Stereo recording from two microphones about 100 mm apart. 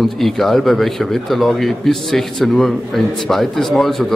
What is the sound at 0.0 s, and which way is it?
Speech, centre (ahead or behind).